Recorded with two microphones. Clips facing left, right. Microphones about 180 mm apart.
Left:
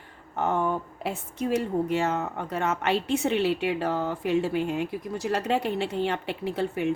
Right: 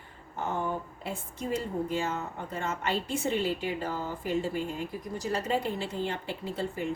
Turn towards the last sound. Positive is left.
turn(degrees=70)  # may be behind; listen again after turning